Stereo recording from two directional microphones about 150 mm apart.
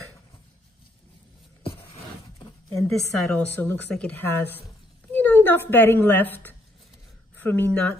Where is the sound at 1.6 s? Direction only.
35° left (ahead or behind).